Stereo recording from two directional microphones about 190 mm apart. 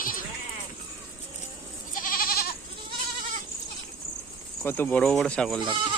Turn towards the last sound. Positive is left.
turn(degrees=-25)  # may be behind; listen again after turning